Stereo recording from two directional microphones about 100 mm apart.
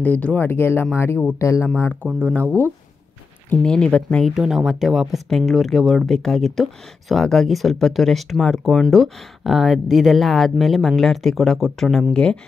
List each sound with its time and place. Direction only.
0.0 s speech: 15° left (ahead or behind); by 1.7 s 30° left (ahead or behind)
2.0 s speech: 15° left (ahead or behind)
3.4 s speech: 10° left (ahead or behind)
4.3 s speech: 5° right (ahead or behind)